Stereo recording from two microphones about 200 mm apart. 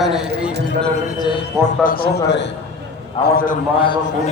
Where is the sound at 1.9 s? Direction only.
50° left (ahead or behind).